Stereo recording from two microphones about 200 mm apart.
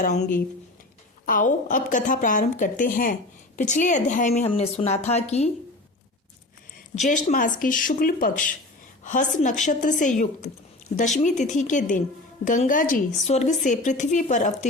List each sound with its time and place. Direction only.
0.0 s speech: 40° left (ahead or behind)
7.0 s speech: 40° left (ahead or behind)
11.2 s speech: 35° left (ahead or behind)